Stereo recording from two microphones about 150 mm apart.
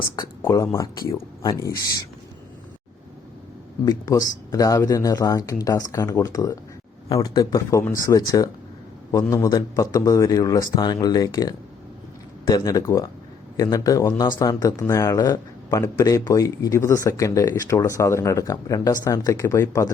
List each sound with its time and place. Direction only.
0.2 s speech: 20° left (ahead or behind)
3.8 s speech: 25° left (ahead or behind)